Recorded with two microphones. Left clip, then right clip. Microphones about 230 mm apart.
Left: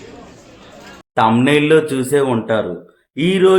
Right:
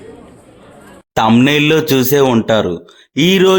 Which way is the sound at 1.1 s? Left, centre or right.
Right.